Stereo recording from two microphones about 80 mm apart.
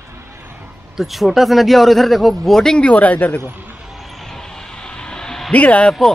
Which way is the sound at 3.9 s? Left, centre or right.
Centre.